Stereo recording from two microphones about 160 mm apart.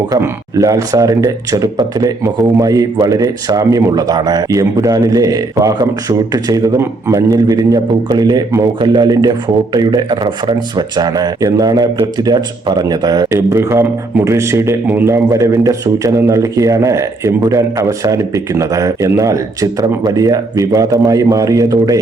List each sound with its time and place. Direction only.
0.1 s speech: 20° right (ahead or behind)